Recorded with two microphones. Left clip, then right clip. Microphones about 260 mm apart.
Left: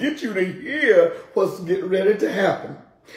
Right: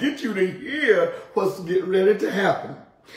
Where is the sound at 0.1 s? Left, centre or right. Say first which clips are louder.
Even; centre.